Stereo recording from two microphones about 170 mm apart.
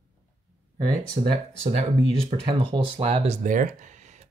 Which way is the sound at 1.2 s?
35° right (ahead or behind).